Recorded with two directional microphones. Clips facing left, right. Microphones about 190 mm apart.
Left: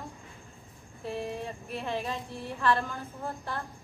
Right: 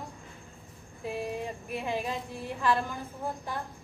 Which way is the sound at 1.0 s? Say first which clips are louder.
Right 1 dB; 10° right (ahead or behind).